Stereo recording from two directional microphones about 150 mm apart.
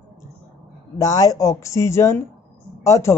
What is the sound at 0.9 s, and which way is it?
Speech, 25° left (ahead or behind).